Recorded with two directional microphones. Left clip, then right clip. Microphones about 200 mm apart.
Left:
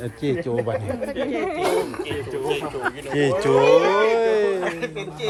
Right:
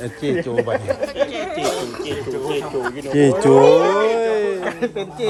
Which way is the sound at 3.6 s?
55° right (ahead or behind).